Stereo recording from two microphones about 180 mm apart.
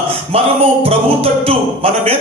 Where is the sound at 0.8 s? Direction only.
35° right (ahead or behind).